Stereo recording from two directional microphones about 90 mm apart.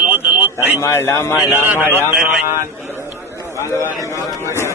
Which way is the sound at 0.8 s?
35° left (ahead or behind).